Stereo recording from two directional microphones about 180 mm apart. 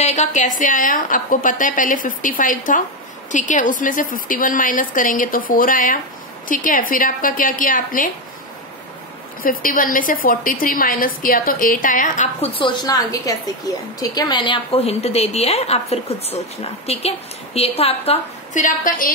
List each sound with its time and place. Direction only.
0.0 s a woman's voice: 40° left (ahead or behind)
9.4 s a woman's voice: 50° left (ahead or behind)
12.5 s a woman's voice: 25° left (ahead or behind); by 19.1 s 50° left (ahead or behind)